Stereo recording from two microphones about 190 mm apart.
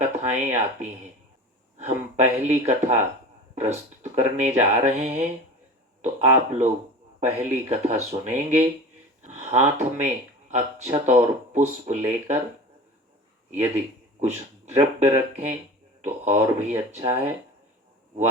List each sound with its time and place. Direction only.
0.2 s speech: 35° right (ahead or behind)
13.5 s speech: 35° right (ahead or behind)